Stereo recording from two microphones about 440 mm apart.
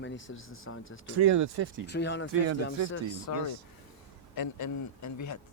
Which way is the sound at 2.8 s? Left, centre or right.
Left.